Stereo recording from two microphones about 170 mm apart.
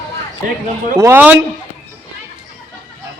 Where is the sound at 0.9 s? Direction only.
15° right (ahead or behind).